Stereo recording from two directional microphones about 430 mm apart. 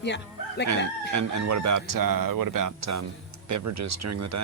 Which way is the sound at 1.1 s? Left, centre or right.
Right.